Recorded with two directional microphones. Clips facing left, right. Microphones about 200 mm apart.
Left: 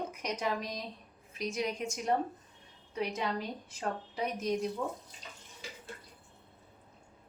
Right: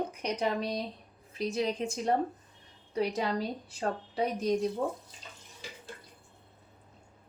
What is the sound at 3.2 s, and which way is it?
Speech, 35° right (ahead or behind).